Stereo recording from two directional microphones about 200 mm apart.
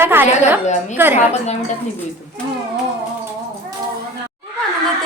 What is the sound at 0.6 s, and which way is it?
Speech, 35° left (ahead or behind).